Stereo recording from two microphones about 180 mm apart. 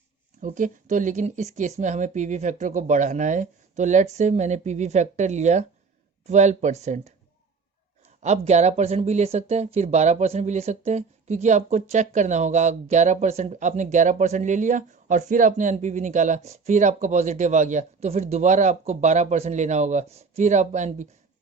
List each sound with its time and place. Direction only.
0.4 s speech: 45° right (ahead or behind)